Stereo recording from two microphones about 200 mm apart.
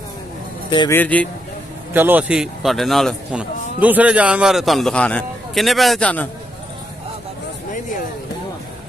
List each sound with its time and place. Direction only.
0.7 s speech: 25° left (ahead or behind)
0.9 s speech: 5° left (ahead or behind)
2.0 s a man's voice: 10° right (ahead or behind)